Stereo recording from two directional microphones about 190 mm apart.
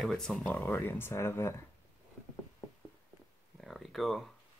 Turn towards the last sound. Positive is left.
turn(degrees=0)  # may be behind; listen again after turning